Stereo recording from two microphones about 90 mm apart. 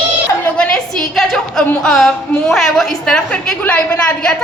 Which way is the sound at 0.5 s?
10° left (ahead or behind).